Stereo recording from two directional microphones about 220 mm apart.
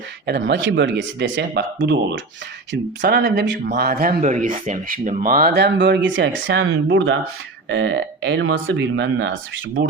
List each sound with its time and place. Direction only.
0.3 s speech: 55° right (ahead or behind)
4.1 s speech: 35° right (ahead or behind); by 9.6 s 60° right (ahead or behind)